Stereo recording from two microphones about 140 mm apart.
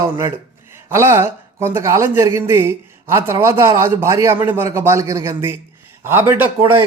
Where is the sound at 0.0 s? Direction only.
20° right (ahead or behind).